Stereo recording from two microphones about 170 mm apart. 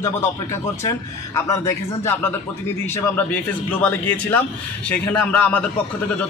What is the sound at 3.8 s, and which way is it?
Speech, 10° left (ahead or behind).